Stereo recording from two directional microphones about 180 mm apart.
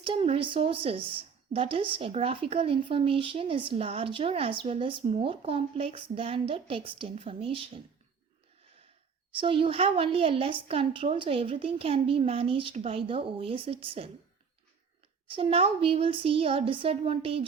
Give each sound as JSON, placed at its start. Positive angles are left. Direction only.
{"t": 0.0, "sound": "a woman's voice", "side_deg": -30}
{"t": 9.4, "sound": "a woman's voice", "side_deg": -30}
{"t": 15.3, "sound": "a woman's voice", "side_deg": -30}